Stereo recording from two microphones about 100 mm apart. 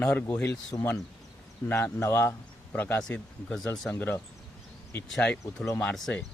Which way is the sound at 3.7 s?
20° left (ahead or behind).